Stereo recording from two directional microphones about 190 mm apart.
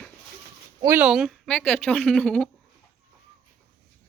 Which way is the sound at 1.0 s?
Centre (ahead or behind).